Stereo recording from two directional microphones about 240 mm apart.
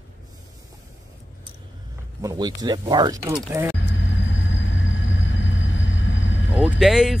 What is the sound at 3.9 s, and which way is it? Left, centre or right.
Vehicle, left.